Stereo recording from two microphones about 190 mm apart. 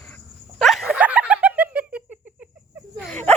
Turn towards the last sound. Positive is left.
turn(degrees=5)  # may be behind; listen again after turning